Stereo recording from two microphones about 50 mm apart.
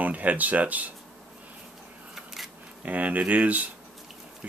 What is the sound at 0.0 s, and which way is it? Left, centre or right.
Speech, right.